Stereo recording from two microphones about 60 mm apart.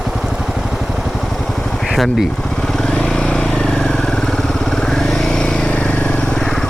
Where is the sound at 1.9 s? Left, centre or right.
Centre.